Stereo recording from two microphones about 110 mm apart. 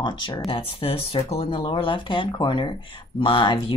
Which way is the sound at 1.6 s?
50° left (ahead or behind).